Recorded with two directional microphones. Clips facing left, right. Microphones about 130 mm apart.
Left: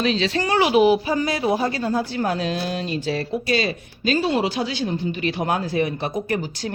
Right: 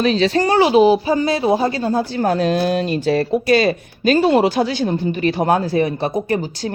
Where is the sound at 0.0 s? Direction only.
45° right (ahead or behind).